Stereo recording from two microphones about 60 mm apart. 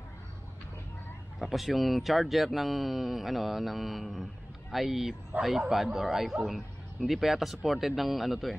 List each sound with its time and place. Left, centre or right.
1.4 s speech: centre
5.3 s a man's voice: right
5.7 s speech: centre